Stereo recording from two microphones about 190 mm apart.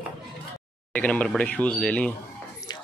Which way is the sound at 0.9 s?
5° left (ahead or behind).